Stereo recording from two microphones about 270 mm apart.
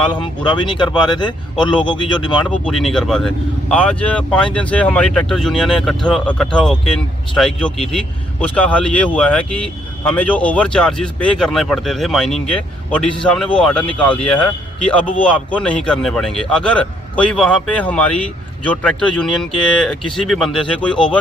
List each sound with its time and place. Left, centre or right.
0.4 s speech: centre
2.5 s speech: centre